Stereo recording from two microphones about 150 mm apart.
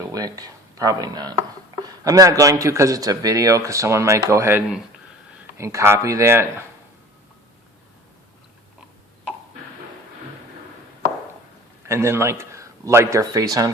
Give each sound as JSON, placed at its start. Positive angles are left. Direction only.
{"t": 0.0, "sound": "speech", "side_deg": -25}
{"t": 11.9, "sound": "a man's voice", "side_deg": -20}